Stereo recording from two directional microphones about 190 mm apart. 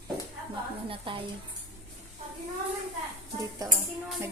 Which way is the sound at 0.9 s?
25° right (ahead or behind).